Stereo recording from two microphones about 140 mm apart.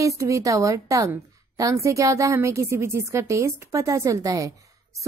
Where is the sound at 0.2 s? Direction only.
20° right (ahead or behind).